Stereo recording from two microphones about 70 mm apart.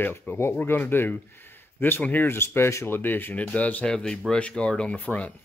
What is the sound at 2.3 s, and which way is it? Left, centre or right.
Speech, left.